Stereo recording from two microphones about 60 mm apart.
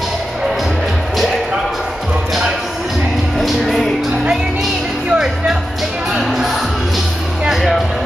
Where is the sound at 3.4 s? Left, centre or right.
Centre.